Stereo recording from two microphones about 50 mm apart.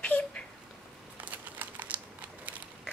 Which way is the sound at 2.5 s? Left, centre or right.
Right.